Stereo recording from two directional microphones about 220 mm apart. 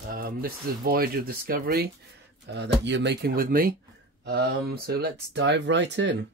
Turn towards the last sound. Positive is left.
turn(degrees=-55)  # may be behind; listen again after turning